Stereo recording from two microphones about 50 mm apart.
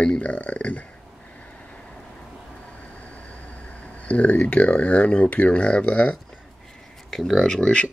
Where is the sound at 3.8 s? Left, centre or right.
Left.